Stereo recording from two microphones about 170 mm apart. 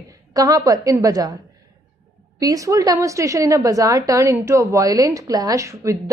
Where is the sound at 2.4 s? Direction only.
20° right (ahead or behind).